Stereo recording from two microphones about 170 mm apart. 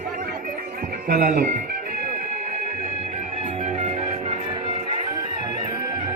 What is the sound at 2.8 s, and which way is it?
Music, 45° right (ahead or behind).